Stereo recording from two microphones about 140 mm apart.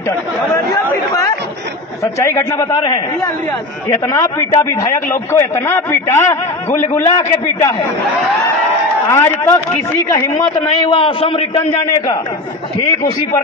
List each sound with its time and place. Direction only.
2.1 s a man's voice: 20° left (ahead or behind)
3.9 s a man's voice: 20° left (ahead or behind)
9.1 s a man's voice: 20° left (ahead or behind)
10.8 s a man's voice: 40° left (ahead or behind)